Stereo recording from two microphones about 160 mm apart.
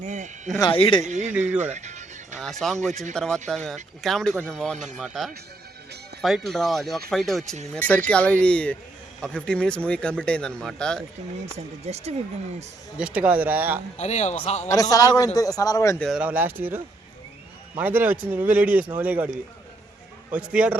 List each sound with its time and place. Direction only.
0.0 s speech: 50° right (ahead or behind)
0.6 s speech: 30° left (ahead or behind)
1.0 s speech: 50° right (ahead or behind)
1.7 s music: 45° right (ahead or behind)
2.4 s speech: centre (ahead or behind)
11.5 s speech: 40° right (ahead or behind)
13.0 s speech: 5° right (ahead or behind)
14.0 s a man's voice: 45° left (ahead or behind)
14.7 s a man's voice: 20° left (ahead or behind)
16.0 s speech: centre (ahead or behind)
20.3 s speech: 10° right (ahead or behind)